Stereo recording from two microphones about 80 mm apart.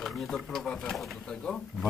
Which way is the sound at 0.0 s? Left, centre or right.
Centre.